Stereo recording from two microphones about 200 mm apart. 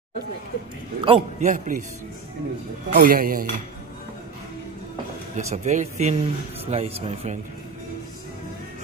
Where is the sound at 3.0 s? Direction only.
45° right (ahead or behind).